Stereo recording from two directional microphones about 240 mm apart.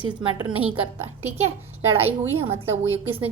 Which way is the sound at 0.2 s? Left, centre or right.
Centre.